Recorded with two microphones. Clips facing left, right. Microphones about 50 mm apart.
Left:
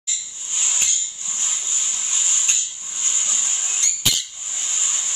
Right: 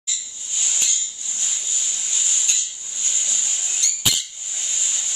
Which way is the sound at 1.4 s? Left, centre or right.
Left.